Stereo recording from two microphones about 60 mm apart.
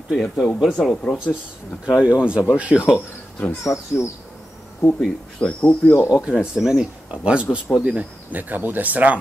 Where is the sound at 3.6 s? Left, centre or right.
Left.